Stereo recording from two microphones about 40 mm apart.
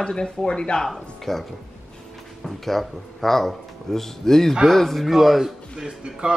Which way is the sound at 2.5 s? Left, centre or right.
Centre.